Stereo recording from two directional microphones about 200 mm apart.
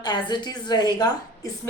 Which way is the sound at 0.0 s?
20° left (ahead or behind).